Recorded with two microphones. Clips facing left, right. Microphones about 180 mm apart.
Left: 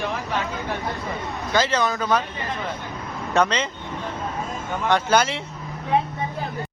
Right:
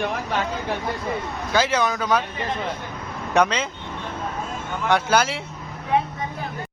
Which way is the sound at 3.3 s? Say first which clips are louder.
Right 1 dB; 10° right (ahead or behind).